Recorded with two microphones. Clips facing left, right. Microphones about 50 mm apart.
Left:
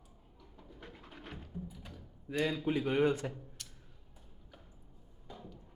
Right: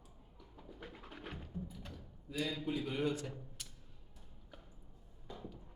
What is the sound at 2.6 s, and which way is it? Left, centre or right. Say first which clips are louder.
Speech: left 8 dB; left.